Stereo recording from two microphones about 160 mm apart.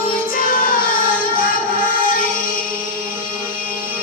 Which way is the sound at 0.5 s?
60° left (ahead or behind).